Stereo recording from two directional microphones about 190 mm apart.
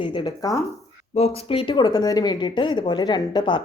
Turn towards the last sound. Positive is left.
turn(degrees=25)  # may be behind; listen again after turning